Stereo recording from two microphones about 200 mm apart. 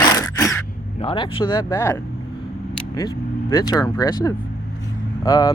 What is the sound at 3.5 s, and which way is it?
Speech, 20° left (ahead or behind).